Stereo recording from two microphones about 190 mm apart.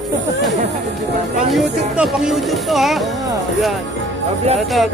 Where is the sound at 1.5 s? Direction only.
Centre (ahead or behind).